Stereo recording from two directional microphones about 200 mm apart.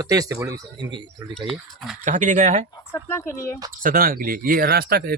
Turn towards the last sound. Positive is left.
turn(degrees=-50)  # may be behind; listen again after turning